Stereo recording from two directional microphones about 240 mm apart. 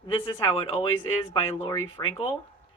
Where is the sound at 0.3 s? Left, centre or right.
Left.